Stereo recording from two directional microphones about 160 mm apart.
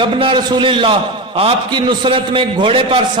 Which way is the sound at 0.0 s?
30° right (ahead or behind).